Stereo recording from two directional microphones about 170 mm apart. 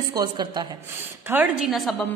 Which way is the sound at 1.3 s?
10° right (ahead or behind).